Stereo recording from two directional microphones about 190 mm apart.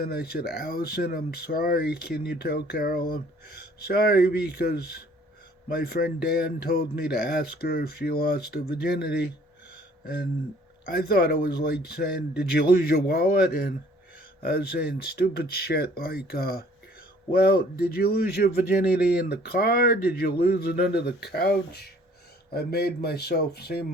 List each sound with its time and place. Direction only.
0.0 s speech: 55° left (ahead or behind)
14.4 s speech: 55° left (ahead or behind)